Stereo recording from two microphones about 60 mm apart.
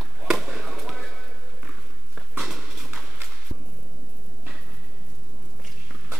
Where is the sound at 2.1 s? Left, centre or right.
Centre.